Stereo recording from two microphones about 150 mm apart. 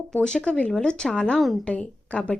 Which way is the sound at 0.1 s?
5° left (ahead or behind).